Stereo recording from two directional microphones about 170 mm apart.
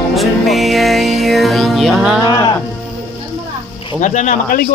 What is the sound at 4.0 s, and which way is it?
Speech, 45° left (ahead or behind).